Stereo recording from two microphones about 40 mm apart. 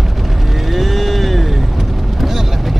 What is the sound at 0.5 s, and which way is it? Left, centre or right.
Vehicle, centre.